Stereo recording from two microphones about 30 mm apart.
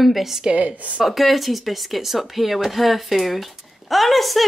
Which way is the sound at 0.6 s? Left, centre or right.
Right.